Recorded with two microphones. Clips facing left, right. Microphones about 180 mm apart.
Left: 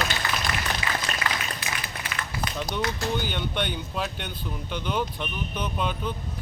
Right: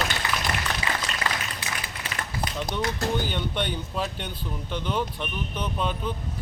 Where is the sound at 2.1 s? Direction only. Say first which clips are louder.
Right 1 dB; 35° right (ahead or behind).